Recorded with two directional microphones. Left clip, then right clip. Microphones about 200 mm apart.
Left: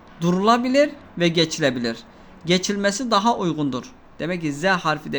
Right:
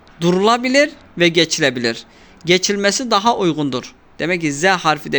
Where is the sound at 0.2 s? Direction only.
20° right (ahead or behind).